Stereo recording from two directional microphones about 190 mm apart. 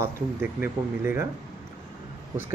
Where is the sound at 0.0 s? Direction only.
10° right (ahead or behind).